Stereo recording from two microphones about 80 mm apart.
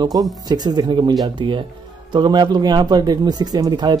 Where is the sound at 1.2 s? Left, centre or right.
Right.